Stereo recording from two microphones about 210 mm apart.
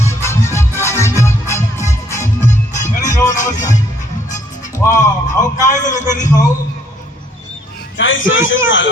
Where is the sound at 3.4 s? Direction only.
35° left (ahead or behind).